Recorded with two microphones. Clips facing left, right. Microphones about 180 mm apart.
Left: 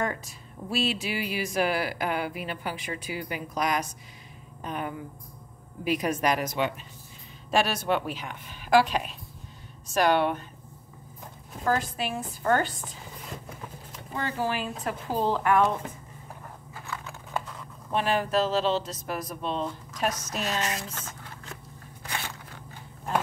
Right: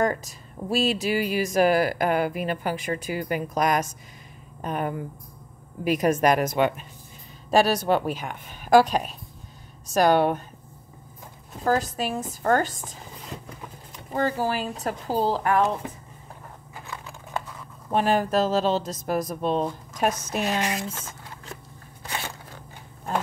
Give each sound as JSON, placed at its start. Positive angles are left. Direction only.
{"t": 0.0, "sound": "speech", "side_deg": -40}
{"t": 7.5, "sound": "speech", "side_deg": -40}
{"t": 11.6, "sound": "speech", "side_deg": -40}
{"t": 14.1, "sound": "speech", "side_deg": -40}
{"t": 17.9, "sound": "speech", "side_deg": -45}
{"t": 20.4, "sound": "a sound", "side_deg": -15}